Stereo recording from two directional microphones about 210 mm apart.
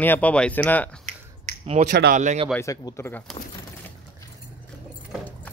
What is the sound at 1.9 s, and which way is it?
Speech, 50° right (ahead or behind).